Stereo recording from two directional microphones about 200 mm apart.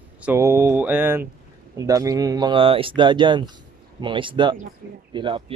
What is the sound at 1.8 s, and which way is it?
Speech, 15° right (ahead or behind).